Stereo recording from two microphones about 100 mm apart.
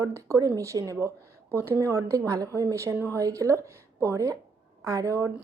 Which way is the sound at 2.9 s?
20° right (ahead or behind).